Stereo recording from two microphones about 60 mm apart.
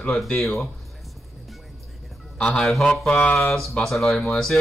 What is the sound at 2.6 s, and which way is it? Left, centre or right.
Speech, centre.